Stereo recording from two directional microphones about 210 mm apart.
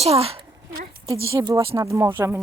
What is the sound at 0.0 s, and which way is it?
Speech, 30° right (ahead or behind).